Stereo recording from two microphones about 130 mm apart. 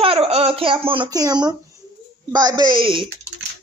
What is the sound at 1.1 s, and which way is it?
Speech, 30° right (ahead or behind).